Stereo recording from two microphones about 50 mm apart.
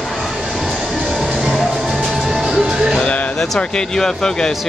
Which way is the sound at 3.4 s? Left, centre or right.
Centre.